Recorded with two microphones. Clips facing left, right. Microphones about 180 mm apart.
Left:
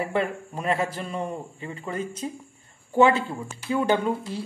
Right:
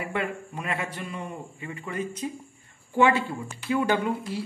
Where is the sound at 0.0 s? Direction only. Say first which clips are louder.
Left 4 dB; 35° left (ahead or behind).